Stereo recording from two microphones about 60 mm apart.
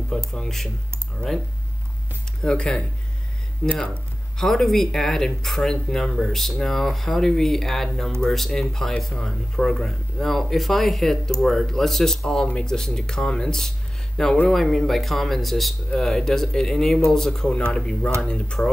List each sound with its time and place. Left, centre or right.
0.3 s speech: centre
2.4 s speech: centre
4.4 s speech: centre
14.5 s speech: centre